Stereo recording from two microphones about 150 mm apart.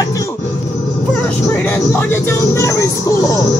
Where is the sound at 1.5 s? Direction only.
15° left (ahead or behind).